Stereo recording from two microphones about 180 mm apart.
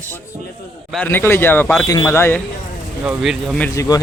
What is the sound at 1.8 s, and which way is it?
Speech, 20° left (ahead or behind).